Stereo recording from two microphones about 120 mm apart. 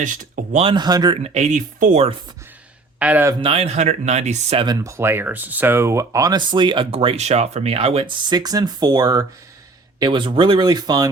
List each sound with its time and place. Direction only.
0.0 s speech: 90° right
0.6 s speech: 40° right (ahead or behind)
1.2 s speech: 70° right (ahead or behind); by 2.0 s 90° right
3.0 s speech: 10° right (ahead or behind)
3.4 s speech: 55° right (ahead or behind); by 4.5 s 70° right (ahead or behind)
4.5 s speech: 35° right (ahead or behind); by 7.3 s 50° right (ahead or behind)
7.3 s speech: 65° right (ahead or behind); by 9.2 s 30° right (ahead or behind)
10.0 s speech: 45° right (ahead or behind)